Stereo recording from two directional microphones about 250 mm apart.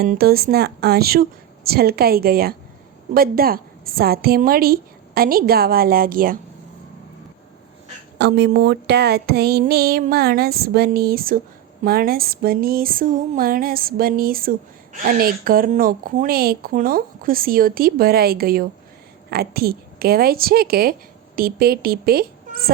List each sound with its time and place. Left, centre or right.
0.0 s a woman's voice: right
8.2 s a woman's voice: right